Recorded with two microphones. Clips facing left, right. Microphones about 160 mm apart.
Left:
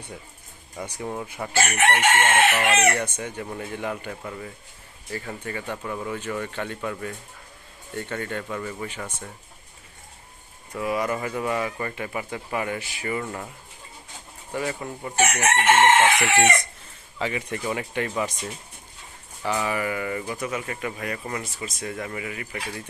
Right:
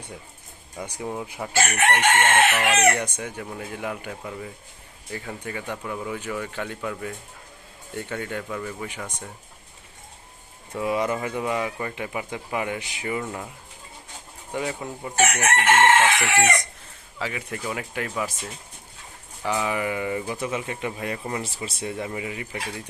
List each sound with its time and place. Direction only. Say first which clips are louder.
0.8 s speech: even; 10° right (ahead or behind)
1.5 s chicken: even; 10° left (ahead or behind)
2.2 s speech: even; centre (ahead or behind)
2.7 s speech: right 1 dB; 10° right (ahead or behind)
8.9 s speech: even; 15° right (ahead or behind)
10.8 s speech: right 1 dB; 25° right (ahead or behind); by 13.5 s 10° right (ahead or behind)
14.5 s speech: even; 15° right (ahead or behind)
15.4 s chicken: left 2 dB; 15° left (ahead or behind)
16.3 s speech: left 1 dB; centre (ahead or behind)
19.5 s speech: even; 15° right (ahead or behind)
21.9 s speech: right 2 dB; 15° right (ahead or behind)